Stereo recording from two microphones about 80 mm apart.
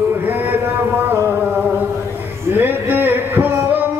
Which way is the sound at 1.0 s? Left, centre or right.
Right.